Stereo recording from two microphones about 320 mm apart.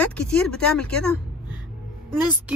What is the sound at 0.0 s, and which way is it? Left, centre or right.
Speech, centre.